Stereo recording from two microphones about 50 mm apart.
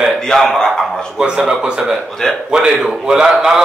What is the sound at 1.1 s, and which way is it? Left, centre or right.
A man's voice, centre.